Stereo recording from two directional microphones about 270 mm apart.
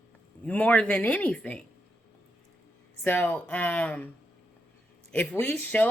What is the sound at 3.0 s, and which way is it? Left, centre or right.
Speech, centre.